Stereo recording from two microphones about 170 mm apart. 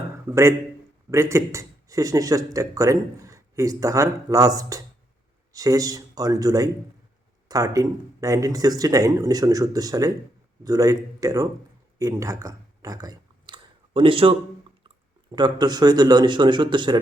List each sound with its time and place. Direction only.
0.3 s speech: 15° right (ahead or behind)
11.9 s a sound: 20° right (ahead or behind)
14.8 s speech: 25° right (ahead or behind)